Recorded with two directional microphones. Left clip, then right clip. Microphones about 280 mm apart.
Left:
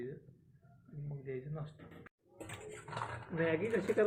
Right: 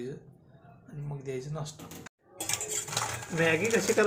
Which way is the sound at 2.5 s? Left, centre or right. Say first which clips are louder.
Right 13 dB; right.